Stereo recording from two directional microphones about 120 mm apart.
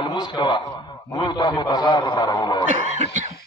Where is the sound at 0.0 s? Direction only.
40° left (ahead or behind).